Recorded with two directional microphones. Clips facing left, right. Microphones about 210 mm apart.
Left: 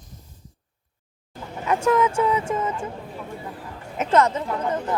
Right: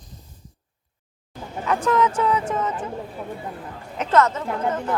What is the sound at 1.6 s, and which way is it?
A woman's voice, 10° left (ahead or behind).